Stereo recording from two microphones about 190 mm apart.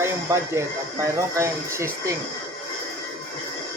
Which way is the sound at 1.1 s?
15° right (ahead or behind).